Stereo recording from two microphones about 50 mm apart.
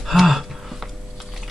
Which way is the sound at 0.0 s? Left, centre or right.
Centre.